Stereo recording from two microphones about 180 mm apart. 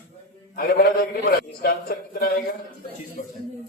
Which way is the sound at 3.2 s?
45° left (ahead or behind).